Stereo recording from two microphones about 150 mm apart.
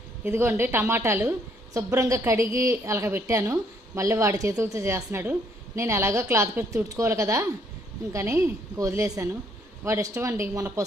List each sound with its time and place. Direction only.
0.3 s a woman's voice: 15° right (ahead or behind)